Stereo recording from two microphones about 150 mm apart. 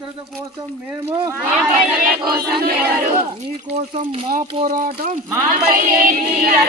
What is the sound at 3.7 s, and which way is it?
Speech, 50° right (ahead or behind).